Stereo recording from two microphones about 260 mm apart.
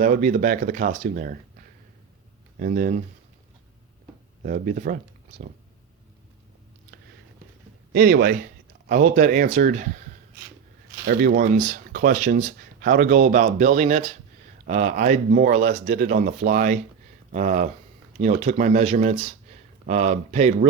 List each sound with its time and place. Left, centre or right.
0.0 s speech: right
4.4 s speech: right
7.9 s speech: right
11.0 s speech: right